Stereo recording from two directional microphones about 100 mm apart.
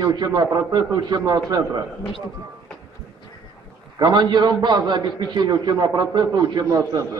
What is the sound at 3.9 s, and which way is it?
A man's voice, 45° right (ahead or behind).